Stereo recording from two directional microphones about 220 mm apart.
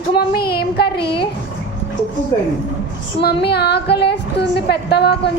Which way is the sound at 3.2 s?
45° left (ahead or behind).